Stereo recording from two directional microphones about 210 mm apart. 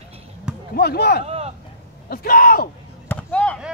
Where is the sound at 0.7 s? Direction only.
50° left (ahead or behind).